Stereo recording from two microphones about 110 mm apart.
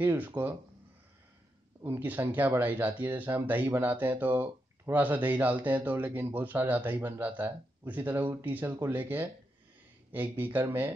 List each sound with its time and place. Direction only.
0.0 s speech: 15° right (ahead or behind)
1.9 s speech: 15° right (ahead or behind)